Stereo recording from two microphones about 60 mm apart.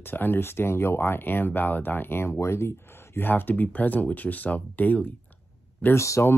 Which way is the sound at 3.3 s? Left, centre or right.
Left.